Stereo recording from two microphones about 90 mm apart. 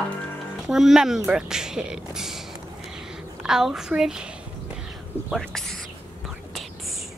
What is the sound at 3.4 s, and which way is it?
Speech, 5° right (ahead or behind).